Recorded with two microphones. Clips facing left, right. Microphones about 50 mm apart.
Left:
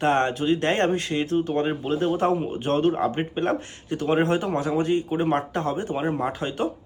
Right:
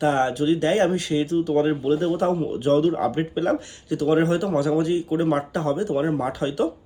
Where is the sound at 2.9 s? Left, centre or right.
Left.